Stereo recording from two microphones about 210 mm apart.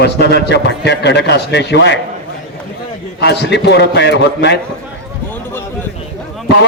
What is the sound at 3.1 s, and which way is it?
A man's voice, 55° left (ahead or behind).